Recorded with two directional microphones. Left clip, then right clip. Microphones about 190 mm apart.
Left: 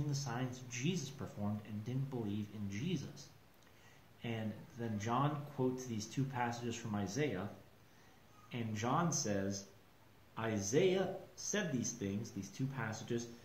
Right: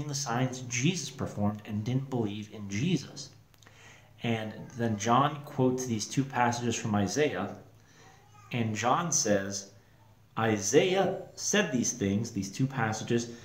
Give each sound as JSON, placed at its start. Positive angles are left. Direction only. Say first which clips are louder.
{"t": 0.0, "sound": "speech", "louder": "right 11 dB", "side_deg": -15}
{"t": 4.2, "sound": "speech", "louder": "right 11 dB", "side_deg": -15}
{"t": 8.5, "sound": "speech", "louder": "right 11 dB", "side_deg": -15}